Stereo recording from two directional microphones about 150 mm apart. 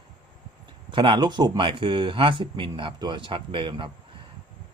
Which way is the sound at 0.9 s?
30° right (ahead or behind).